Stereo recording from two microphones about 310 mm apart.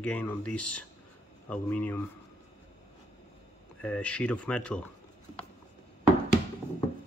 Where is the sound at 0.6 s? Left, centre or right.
Left.